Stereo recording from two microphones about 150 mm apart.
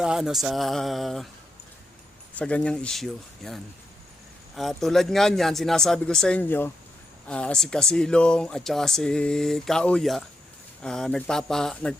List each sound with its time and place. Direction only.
0.0 s speech: 5° right (ahead or behind)
2.4 s speech: 10° left (ahead or behind)